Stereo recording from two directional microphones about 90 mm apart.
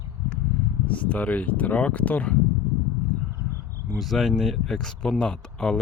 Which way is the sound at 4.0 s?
Centre (ahead or behind).